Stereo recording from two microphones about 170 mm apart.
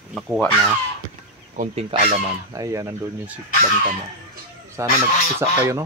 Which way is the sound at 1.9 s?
35° right (ahead or behind).